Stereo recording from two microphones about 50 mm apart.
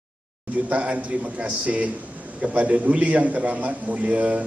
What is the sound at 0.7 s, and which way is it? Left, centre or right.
A man's voice, right.